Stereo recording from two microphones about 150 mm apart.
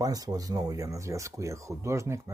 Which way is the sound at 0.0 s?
25° right (ahead or behind).